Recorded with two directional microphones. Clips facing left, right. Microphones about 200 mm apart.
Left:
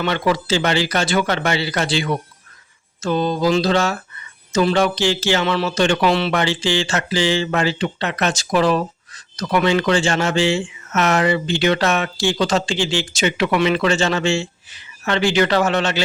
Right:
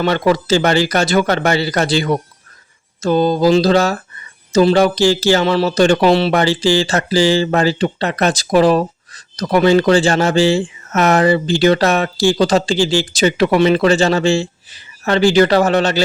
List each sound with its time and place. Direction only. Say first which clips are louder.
0.0 s speech: right 5 dB; 40° right (ahead or behind)